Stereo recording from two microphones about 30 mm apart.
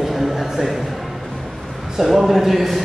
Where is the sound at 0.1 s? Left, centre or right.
Centre.